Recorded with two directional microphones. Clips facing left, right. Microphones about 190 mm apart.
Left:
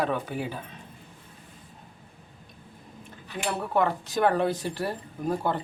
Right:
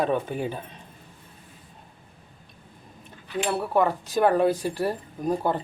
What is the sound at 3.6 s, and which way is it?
Speech, 15° right (ahead or behind).